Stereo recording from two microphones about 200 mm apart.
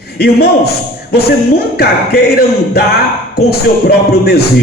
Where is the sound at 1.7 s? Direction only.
50° left (ahead or behind).